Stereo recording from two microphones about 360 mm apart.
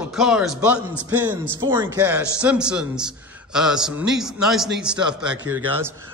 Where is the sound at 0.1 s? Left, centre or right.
Centre.